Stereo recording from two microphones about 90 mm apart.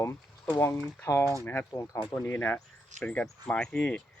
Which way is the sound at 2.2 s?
25° left (ahead or behind).